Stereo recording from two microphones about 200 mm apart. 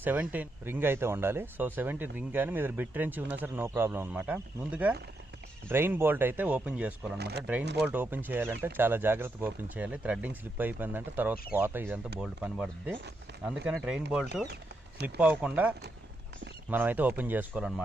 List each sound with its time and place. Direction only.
0.0 s speech: 10° right (ahead or behind)
7.2 s speech: 55° right (ahead or behind)
7.8 s speech: 10° right (ahead or behind)
16.7 s speech: 10° right (ahead or behind)